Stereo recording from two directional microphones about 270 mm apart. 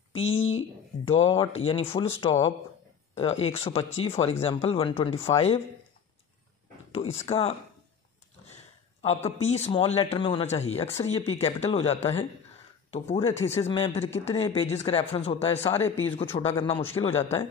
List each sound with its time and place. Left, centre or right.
0.1 s speech: left
0.4 s a sound: left
1.0 s speech: centre
6.9 s speech: left
9.0 s speech: left
15.8 s a man's voice: centre
16.4 s a man's voice: centre